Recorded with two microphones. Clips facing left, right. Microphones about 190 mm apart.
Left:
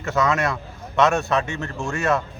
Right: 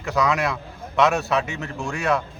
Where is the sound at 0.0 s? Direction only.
Centre (ahead or behind).